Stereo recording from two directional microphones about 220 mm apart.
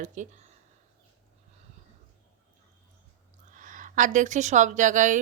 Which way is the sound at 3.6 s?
35° right (ahead or behind).